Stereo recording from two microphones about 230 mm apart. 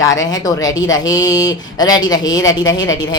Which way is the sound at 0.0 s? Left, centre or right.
Centre.